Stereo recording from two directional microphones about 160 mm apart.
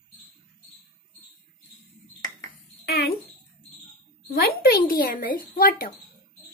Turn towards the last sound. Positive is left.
turn(degrees=65)  # may be behind; listen again after turning